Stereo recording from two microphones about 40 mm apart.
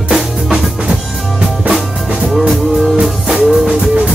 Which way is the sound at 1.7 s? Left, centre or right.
Centre.